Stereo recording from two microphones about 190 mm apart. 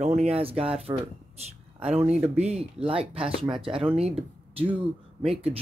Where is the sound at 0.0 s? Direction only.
35° right (ahead or behind).